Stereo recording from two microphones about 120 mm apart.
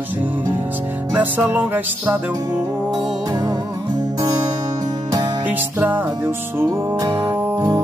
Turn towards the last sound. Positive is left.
turn(degrees=-20)  # may be behind; listen again after turning